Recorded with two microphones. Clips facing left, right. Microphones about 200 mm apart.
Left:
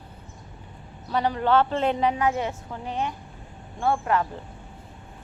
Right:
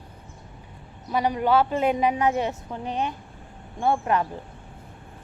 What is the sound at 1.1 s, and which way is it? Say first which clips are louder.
A woman's voice: even; 15° right (ahead or behind).